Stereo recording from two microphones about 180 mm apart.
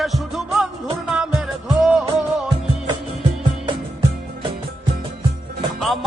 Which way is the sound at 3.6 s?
25° right (ahead or behind).